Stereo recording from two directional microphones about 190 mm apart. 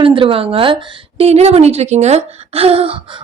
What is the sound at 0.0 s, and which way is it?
A woman's voice, 25° right (ahead or behind).